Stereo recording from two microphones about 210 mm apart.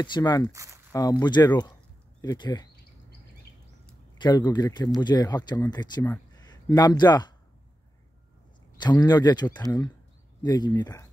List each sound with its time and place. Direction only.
0.0 s speech: 20° left (ahead or behind)
0.5 s speech: 15° right (ahead or behind)
1.2 s speech: 20° left (ahead or behind)
4.2 s a man's voice: 20° left (ahead or behind)
8.7 s speech: 20° left (ahead or behind)